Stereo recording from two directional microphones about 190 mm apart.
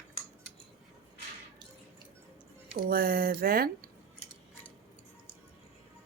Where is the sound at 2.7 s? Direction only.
55° right (ahead or behind).